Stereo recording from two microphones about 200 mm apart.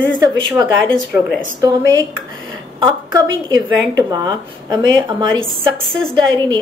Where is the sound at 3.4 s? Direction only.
20° right (ahead or behind).